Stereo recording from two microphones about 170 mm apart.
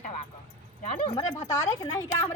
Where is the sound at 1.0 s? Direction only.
25° left (ahead or behind).